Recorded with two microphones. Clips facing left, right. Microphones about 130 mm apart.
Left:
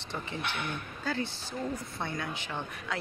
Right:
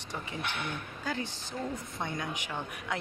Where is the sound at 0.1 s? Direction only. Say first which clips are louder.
Left 1 dB; 15° right (ahead or behind).